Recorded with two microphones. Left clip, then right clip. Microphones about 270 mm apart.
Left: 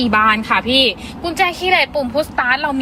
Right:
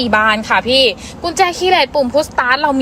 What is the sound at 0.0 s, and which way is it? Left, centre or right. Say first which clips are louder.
A woman's voice: right 1 dB; centre.